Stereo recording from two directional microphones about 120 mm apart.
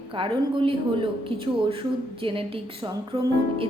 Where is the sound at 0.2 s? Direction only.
45° right (ahead or behind).